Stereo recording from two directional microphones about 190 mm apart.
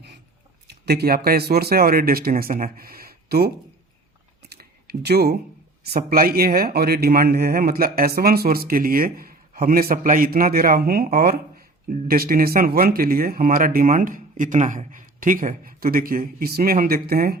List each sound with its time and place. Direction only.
0.7 s speech: 60° right (ahead or behind)
4.4 s a sound: 55° right (ahead or behind)
5.9 s speech: 50° right (ahead or behind)